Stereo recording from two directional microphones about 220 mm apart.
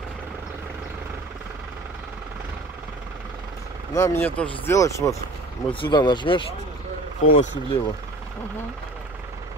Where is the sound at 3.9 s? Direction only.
10° left (ahead or behind).